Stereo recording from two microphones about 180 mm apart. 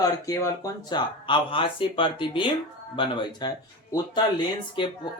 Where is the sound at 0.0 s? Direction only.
20° left (ahead or behind).